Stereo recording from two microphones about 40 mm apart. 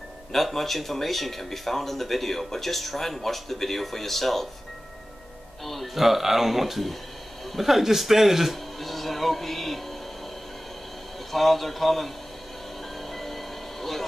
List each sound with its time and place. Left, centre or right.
0.3 s speech: centre
5.7 s speech: centre
11.3 s speech: centre
13.1 s a sound: centre